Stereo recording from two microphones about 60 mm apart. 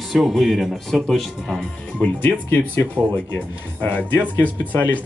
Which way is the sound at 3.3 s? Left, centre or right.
Left.